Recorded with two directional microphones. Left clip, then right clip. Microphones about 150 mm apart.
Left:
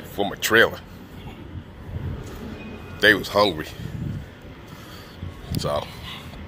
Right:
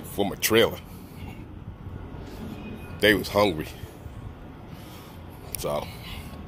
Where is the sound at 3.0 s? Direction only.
25° right (ahead or behind).